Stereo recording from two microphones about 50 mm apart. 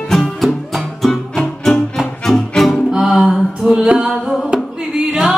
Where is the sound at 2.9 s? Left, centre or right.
Centre.